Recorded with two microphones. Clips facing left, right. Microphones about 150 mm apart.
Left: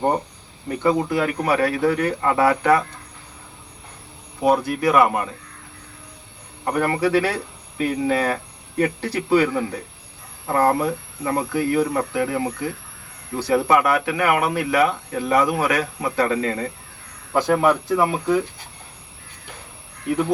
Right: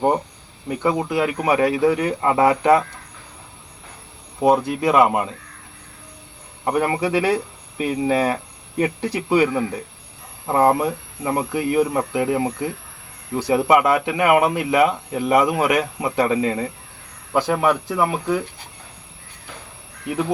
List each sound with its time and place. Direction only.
0.8 s speech: 15° right (ahead or behind)
4.4 s speech: 20° right (ahead or behind)
6.7 s speech: 15° right (ahead or behind)